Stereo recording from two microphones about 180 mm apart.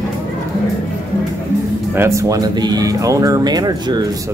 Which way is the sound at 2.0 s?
15° right (ahead or behind).